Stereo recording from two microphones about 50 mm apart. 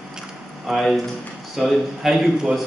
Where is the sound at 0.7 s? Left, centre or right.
Centre.